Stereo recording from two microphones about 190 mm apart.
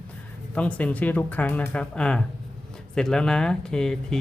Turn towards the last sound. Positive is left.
turn(degrees=5)  # may be behind; listen again after turning